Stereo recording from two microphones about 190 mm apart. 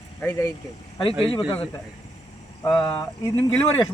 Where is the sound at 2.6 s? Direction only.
25° left (ahead or behind).